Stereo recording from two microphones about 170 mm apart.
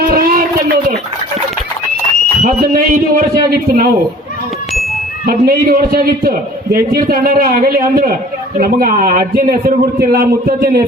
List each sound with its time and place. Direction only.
0.1 s a sound: 60° right (ahead or behind)
2.4 s a man's voice: 55° right (ahead or behind)
5.2 s a man's voice: 60° right (ahead or behind)